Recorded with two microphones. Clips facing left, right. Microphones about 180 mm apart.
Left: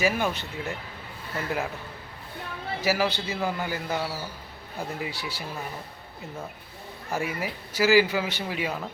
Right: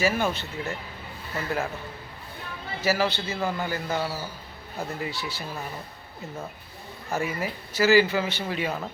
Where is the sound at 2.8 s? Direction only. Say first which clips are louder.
Right 1 dB; 10° left (ahead or behind).